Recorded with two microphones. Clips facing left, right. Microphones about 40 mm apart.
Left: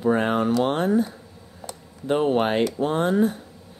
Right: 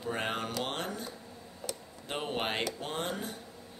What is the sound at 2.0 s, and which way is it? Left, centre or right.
Speech, centre.